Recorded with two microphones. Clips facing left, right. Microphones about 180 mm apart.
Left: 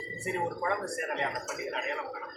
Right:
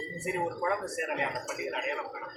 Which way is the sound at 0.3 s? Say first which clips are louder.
Right 1 dB; centre (ahead or behind).